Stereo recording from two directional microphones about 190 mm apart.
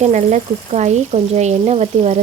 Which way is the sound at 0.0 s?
35° right (ahead or behind).